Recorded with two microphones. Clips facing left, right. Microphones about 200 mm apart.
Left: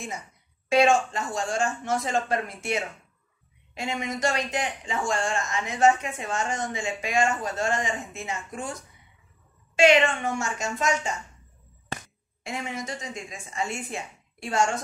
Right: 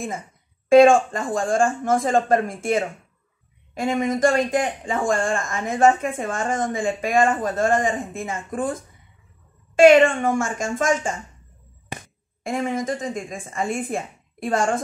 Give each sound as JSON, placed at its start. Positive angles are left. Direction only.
{"t": 0.7, "sound": "speech", "side_deg": -50}
{"t": 12.4, "sound": "speech", "side_deg": -50}